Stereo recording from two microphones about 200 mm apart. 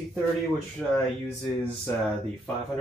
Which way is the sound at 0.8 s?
5° left (ahead or behind).